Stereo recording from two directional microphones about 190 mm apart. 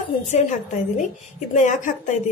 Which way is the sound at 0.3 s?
40° left (ahead or behind).